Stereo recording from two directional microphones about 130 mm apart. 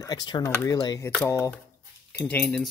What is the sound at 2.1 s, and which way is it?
Speech, 10° left (ahead or behind).